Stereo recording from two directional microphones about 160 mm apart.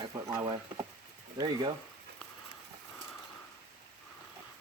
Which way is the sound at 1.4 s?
30° right (ahead or behind).